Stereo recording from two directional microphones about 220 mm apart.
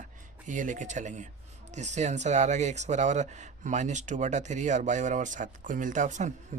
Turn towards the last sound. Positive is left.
turn(degrees=-30)  # may be behind; listen again after turning